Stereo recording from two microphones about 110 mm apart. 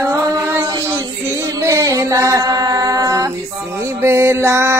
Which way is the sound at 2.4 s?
35° right (ahead or behind).